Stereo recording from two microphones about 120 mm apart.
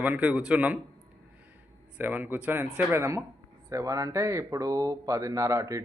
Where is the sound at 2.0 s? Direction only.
15° right (ahead or behind).